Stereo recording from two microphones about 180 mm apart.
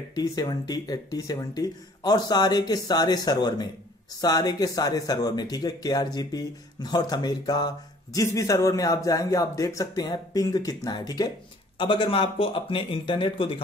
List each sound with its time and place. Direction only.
0.1 s speech: 20° left (ahead or behind)